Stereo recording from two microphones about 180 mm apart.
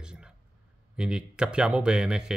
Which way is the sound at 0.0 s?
5° right (ahead or behind).